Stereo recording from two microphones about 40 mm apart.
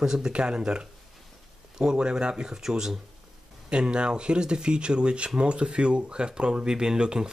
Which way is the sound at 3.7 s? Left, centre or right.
Right.